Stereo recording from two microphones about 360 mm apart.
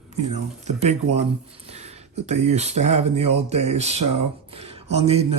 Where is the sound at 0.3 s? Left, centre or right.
Centre.